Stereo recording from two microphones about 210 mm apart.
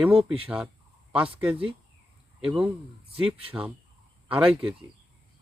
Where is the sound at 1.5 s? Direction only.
25° right (ahead or behind).